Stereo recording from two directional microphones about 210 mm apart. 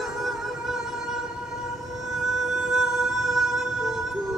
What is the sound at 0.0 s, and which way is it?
Music, centre (ahead or behind).